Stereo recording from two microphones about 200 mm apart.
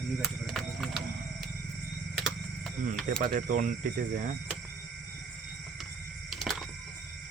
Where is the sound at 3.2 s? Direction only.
40° right (ahead or behind).